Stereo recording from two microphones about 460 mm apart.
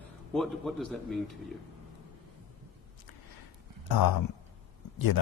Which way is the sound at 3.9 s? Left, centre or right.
Left.